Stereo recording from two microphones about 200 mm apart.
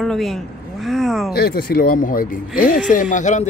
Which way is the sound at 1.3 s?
50° left (ahead or behind).